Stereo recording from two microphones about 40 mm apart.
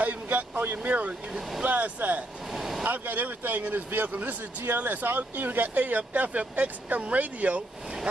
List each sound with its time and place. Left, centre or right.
0.0 s speech: right
2.5 s vehicle: centre
2.8 s speech: right